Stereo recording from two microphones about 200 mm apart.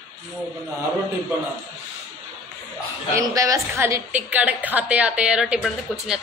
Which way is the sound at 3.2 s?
15° right (ahead or behind).